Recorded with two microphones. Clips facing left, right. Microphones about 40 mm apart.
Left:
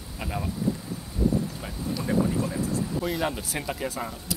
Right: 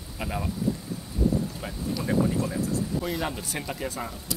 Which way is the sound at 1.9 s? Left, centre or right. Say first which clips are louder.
Even; centre.